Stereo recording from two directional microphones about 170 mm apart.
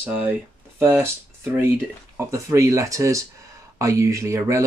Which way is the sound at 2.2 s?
15° right (ahead or behind).